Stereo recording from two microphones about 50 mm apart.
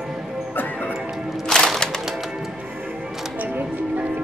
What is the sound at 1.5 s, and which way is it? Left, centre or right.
Music, centre.